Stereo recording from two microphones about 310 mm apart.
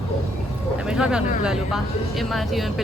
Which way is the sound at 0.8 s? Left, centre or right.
Centre.